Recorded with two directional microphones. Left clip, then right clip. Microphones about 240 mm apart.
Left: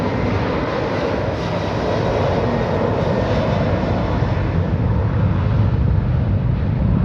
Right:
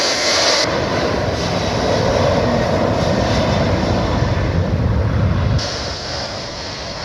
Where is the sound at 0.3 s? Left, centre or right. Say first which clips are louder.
Right 6 dB; centre.